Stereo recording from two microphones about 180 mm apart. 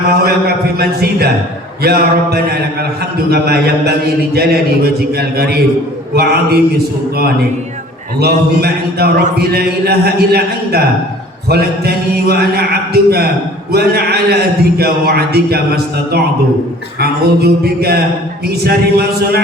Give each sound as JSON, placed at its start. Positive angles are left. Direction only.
{"t": 0.1, "sound": "speech", "side_deg": -60}